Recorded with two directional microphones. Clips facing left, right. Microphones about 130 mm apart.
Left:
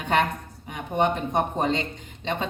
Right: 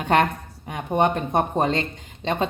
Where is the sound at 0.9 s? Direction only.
50° right (ahead or behind).